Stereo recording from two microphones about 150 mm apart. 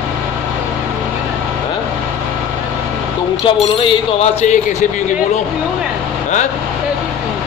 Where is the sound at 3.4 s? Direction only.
35° left (ahead or behind).